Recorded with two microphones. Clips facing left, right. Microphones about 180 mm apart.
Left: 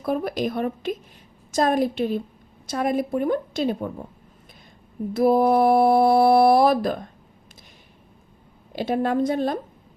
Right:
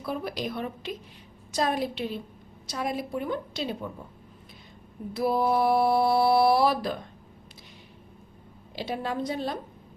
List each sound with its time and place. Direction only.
0.0 s speech: 50° left (ahead or behind)
5.1 s speech: 50° left (ahead or behind)
8.7 s speech: 50° left (ahead or behind)